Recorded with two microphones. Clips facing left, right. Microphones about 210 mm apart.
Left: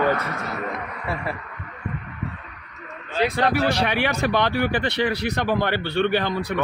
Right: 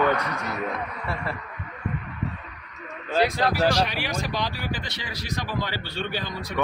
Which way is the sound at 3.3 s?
60° left (ahead or behind).